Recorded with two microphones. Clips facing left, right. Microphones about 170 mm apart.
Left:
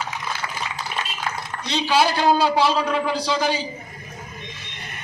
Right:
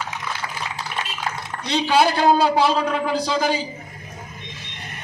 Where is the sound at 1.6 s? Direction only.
55° right (ahead or behind).